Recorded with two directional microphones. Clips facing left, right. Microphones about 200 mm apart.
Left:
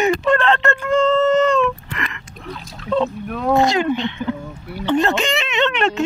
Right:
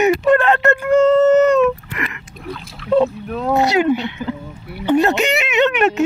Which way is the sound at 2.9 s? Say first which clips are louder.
Right 4 dB; 10° right (ahead or behind).